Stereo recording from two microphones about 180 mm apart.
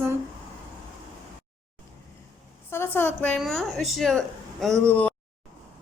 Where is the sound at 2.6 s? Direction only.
10° left (ahead or behind).